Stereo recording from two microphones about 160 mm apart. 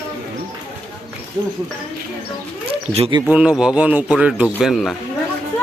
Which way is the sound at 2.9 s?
35° right (ahead or behind).